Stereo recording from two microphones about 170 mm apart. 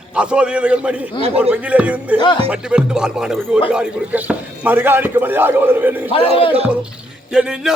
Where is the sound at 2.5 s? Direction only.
5° right (ahead or behind).